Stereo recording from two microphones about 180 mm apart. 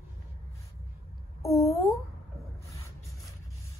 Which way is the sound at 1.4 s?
15° left (ahead or behind).